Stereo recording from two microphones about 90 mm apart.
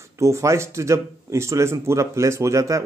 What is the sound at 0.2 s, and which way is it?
Speech, 35° right (ahead or behind).